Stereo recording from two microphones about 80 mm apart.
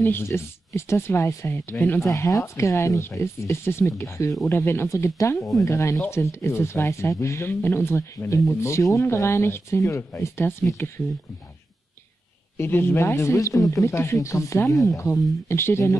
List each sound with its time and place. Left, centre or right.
0.0 s speech: left
2.1 s speech: left
12.5 s speech: left